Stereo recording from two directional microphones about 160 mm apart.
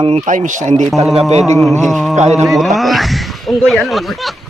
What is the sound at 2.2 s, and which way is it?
Speech, 45° right (ahead or behind).